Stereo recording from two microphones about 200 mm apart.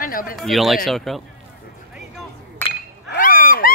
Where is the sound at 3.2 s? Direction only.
45° left (ahead or behind).